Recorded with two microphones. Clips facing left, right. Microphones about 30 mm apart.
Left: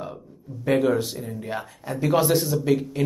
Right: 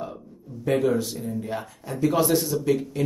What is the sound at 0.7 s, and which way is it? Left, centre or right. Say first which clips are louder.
Speech: left 1 dB; centre.